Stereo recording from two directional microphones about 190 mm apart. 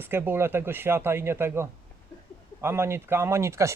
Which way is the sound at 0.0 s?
10° right (ahead or behind).